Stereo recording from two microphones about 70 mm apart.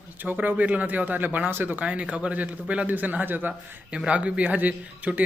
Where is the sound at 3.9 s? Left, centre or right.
Centre.